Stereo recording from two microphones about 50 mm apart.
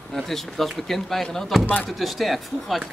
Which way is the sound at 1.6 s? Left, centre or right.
Left.